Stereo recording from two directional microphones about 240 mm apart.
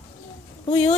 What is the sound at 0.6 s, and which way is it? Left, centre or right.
Speech, left.